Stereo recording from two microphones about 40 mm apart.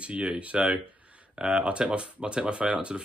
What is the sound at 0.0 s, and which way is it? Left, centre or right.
Speech, right.